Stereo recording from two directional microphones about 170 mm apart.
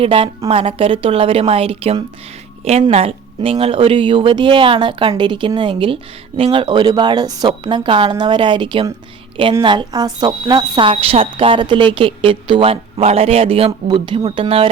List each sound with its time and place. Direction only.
0.0 s speech: 35° right (ahead or behind)